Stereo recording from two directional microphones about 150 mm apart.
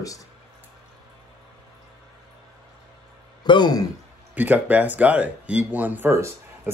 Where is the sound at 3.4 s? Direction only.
30° left (ahead or behind).